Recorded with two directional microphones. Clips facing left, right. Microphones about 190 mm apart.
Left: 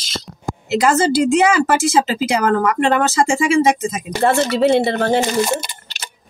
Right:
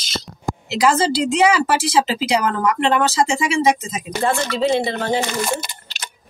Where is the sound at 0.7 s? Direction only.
50° left (ahead or behind).